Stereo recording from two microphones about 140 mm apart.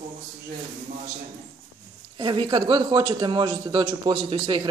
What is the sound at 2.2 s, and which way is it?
A man's voice, 35° right (ahead or behind).